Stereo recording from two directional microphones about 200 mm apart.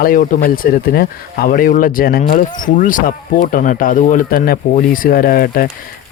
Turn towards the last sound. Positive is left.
turn(degrees=50)  # may be behind; listen again after turning